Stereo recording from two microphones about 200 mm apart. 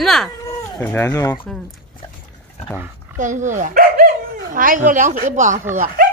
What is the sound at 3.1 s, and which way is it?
A woman's voice, 40° right (ahead or behind).